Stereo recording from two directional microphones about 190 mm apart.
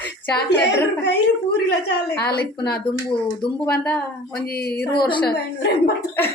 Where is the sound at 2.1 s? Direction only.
60° left (ahead or behind).